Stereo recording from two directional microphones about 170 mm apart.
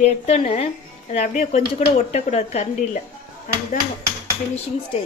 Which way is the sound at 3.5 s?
55° left (ahead or behind).